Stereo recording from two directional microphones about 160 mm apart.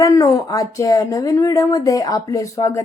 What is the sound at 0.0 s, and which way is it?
Speech, 20° left (ahead or behind).